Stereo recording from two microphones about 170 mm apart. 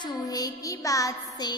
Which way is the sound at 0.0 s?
20° left (ahead or behind).